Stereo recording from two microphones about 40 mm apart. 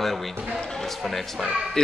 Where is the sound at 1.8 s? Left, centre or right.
Centre.